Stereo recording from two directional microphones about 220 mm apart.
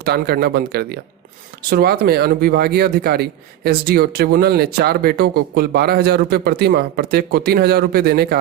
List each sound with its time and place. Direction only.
0.0 s speech: 45° right (ahead or behind)